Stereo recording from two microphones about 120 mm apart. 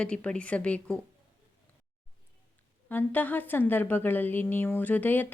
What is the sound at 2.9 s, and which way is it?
A woman's voice, 15° left (ahead or behind).